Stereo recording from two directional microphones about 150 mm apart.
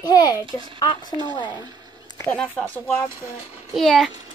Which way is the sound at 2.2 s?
5° left (ahead or behind).